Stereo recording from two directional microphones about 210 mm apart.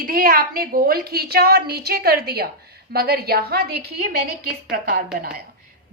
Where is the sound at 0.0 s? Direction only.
45° right (ahead or behind).